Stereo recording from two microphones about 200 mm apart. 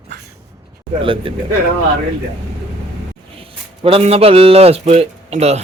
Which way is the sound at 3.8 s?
30° right (ahead or behind).